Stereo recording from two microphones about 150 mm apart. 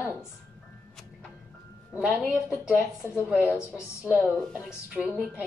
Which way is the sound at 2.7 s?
15° left (ahead or behind).